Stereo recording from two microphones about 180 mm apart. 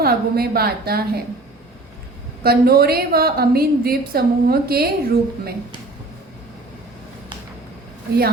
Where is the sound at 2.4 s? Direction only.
55° right (ahead or behind).